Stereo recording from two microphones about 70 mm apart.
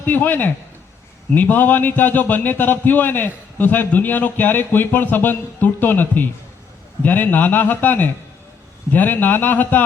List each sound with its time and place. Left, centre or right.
0.0 s speech: left